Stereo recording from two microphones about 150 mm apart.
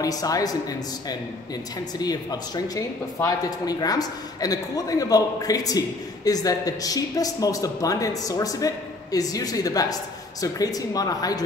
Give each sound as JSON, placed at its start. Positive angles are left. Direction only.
{"t": 0.0, "sound": "speech", "side_deg": 25}